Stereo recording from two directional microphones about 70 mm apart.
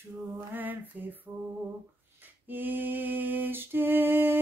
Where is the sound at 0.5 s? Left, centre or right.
Right.